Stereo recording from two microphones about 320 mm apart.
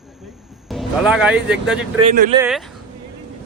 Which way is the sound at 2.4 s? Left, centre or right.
Centre.